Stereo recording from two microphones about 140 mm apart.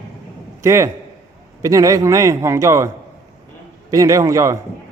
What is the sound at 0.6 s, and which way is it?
A man's voice, 20° right (ahead or behind).